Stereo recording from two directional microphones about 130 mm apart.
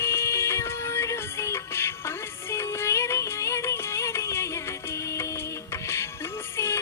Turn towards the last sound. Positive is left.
turn(degrees=20)  # may be behind; listen again after turning